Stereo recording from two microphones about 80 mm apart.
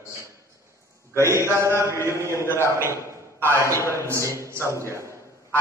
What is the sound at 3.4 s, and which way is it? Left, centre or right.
Speech, right.